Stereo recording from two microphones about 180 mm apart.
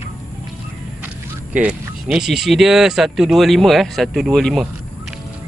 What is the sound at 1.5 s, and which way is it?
Speech, 5° right (ahead or behind).